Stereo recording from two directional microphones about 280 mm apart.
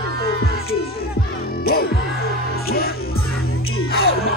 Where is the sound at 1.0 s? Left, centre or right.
Left.